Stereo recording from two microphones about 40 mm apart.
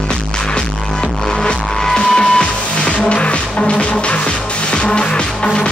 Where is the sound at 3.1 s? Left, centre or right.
Left.